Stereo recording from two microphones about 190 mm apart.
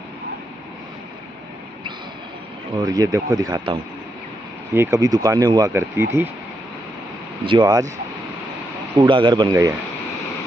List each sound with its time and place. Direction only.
2.8 s speech: 20° right (ahead or behind)
7.4 s speech: 20° right (ahead or behind)
8.9 s speech: 25° right (ahead or behind)